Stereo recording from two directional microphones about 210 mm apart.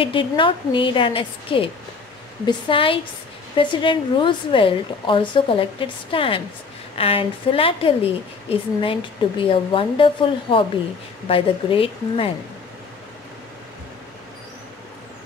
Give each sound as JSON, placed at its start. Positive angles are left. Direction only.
{"t": 0.0, "sound": "a woman's voice", "side_deg": 25}